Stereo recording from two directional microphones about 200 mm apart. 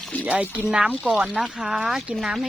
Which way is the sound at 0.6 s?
5° right (ahead or behind).